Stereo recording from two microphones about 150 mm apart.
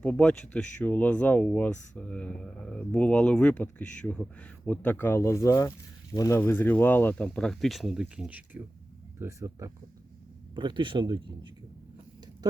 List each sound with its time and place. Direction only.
0.0 s speech: 10° left (ahead or behind); by 11.5 s 30° right (ahead or behind)